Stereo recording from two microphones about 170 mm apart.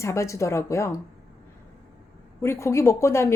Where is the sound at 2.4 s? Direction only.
15° left (ahead or behind).